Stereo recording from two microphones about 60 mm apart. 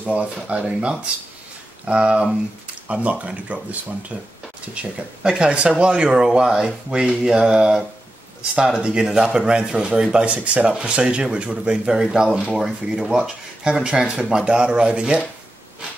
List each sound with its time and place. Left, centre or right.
0.0 s speech: right; by 13.8 s centre
13.8 s speech: centre